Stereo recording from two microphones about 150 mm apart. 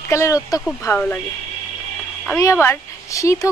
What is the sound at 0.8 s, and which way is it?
Speech, 10° left (ahead or behind).